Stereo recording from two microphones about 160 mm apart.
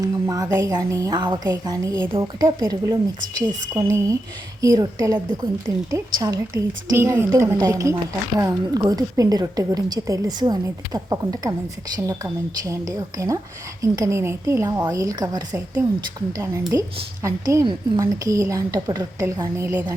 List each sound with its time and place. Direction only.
0.0 s a woman's voice: 20° right (ahead or behind)
2.0 s a woman's voice: 30° right (ahead or behind)